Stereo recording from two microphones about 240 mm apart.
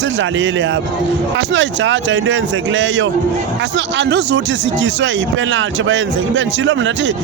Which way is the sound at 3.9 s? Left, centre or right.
Right.